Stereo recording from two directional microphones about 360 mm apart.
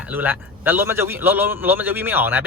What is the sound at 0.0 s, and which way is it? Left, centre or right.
Speech, centre.